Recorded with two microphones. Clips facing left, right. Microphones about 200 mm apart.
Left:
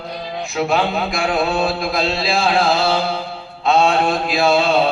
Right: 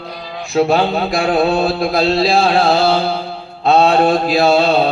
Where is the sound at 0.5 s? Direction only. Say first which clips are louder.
Right 5 dB; 35° right (ahead or behind).